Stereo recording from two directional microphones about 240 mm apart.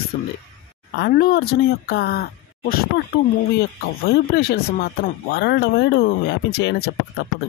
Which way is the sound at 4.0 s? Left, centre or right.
Left.